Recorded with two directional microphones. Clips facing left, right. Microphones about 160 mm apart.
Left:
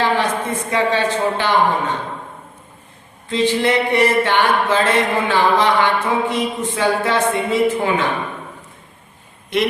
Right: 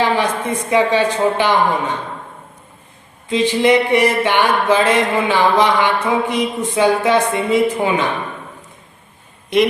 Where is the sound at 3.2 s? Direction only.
15° right (ahead or behind).